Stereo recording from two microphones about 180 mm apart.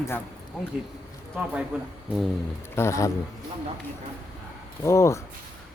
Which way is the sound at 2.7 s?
15° left (ahead or behind).